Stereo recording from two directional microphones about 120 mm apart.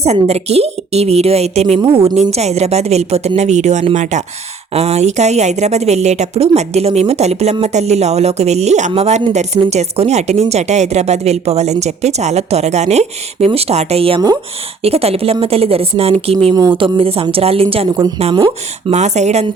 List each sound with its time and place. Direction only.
0.0 s speech: 60° right (ahead or behind)
2.3 s speech: 65° right (ahead or behind)
3.9 s speech: 90° right
4.7 s speech: 60° right (ahead or behind)
18.9 s speech: 70° right (ahead or behind)